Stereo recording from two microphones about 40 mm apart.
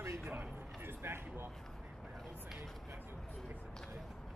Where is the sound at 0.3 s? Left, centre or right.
Right.